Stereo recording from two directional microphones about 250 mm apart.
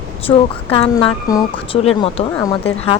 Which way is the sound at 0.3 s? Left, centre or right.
Left.